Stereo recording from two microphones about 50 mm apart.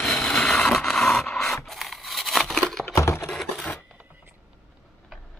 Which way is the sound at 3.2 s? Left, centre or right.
Centre.